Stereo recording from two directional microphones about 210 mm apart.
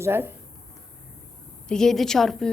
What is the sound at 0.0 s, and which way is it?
Speech, 10° right (ahead or behind).